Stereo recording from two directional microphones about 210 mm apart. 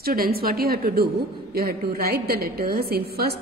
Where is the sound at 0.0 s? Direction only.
45° right (ahead or behind).